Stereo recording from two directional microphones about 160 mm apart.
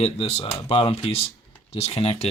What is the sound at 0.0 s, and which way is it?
Speech, 40° left (ahead or behind).